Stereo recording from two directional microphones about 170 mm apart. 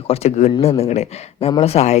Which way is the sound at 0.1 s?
40° left (ahead or behind).